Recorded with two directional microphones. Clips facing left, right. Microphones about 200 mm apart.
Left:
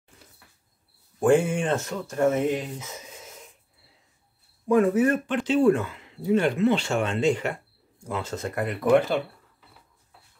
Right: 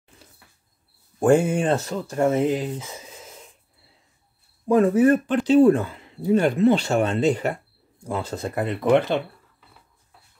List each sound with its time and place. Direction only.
1.2 s speech: 40° right (ahead or behind)
4.6 s speech: 35° right (ahead or behind)